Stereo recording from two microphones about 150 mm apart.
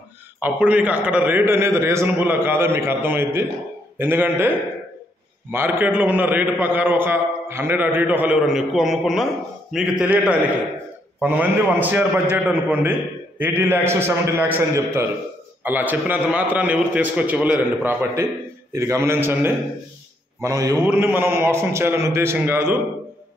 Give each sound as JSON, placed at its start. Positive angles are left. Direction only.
{"t": 0.4, "sound": "a man's voice", "side_deg": -10}